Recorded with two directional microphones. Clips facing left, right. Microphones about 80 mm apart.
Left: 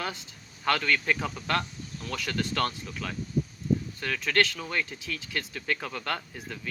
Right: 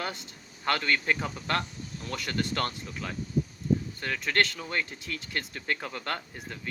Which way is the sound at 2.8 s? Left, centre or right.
Centre.